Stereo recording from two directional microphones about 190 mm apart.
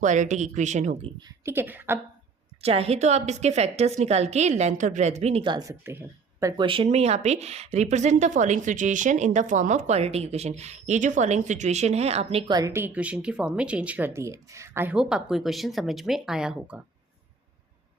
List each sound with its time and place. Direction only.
0.0 s speech: 40° right (ahead or behind)
1.2 s a woman's voice: 15° right (ahead or behind)
2.6 s speech: 30° right (ahead or behind); by 6.0 s 15° right (ahead or behind)
6.4 s speech: 25° right (ahead or behind); by 16.8 s 5° right (ahead or behind)